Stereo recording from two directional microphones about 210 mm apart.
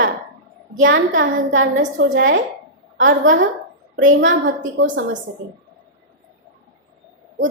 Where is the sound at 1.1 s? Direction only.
65° right (ahead or behind).